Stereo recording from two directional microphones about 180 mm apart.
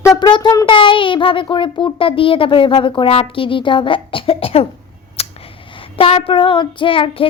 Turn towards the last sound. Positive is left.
turn(degrees=30)  # may be behind; listen again after turning